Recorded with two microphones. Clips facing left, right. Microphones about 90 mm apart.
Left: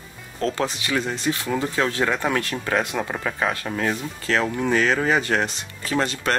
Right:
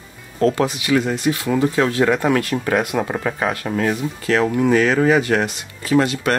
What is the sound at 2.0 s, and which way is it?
Speech, 55° right (ahead or behind).